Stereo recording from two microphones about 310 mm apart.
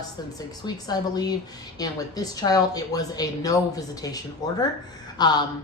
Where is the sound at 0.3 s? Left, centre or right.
Centre.